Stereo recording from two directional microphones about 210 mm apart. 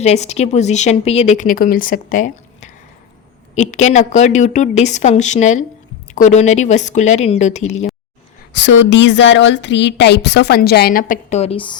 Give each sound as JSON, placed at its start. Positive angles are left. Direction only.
{"t": 0.0, "sound": "speech", "side_deg": 30}
{"t": 8.5, "sound": "speech", "side_deg": 60}